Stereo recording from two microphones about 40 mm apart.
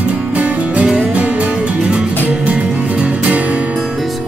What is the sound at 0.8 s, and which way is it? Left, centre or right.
Music, centre.